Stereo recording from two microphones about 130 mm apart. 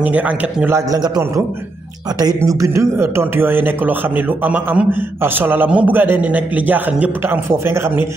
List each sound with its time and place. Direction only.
0.0 s speech: 10° right (ahead or behind)
0.7 s a man's voice: 30° right (ahead or behind)